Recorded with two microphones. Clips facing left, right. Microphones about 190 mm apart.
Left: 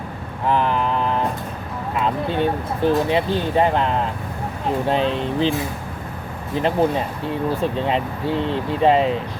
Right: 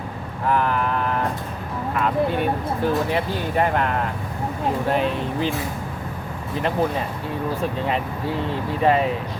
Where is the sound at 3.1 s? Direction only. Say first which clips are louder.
Left 4 dB; 25° left (ahead or behind).